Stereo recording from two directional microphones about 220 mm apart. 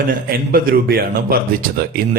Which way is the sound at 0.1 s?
45° right (ahead or behind).